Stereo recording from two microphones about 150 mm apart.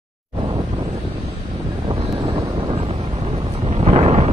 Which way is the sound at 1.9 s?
35° right (ahead or behind).